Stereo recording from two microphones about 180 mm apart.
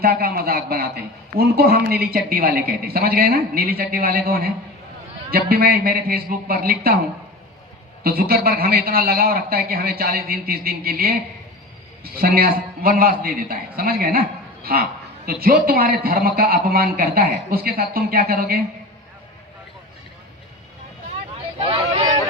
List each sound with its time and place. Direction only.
0.0 s a man's voice: 55° right (ahead or behind)
8.0 s a man's voice: 55° right (ahead or behind)